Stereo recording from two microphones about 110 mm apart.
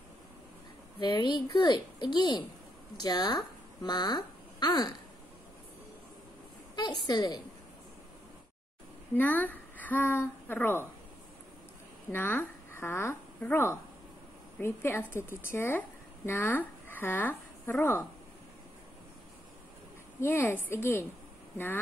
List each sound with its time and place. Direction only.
0.9 s a woman's voice: 45° left (ahead or behind)
6.7 s a woman's voice: 40° left (ahead or behind)
9.1 s a woman's voice: 15° left (ahead or behind)
12.1 s a woman's voice: 20° left (ahead or behind)
20.2 s a woman's voice: 20° left (ahead or behind)